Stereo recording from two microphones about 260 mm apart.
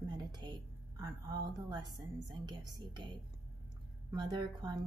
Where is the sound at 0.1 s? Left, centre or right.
Centre.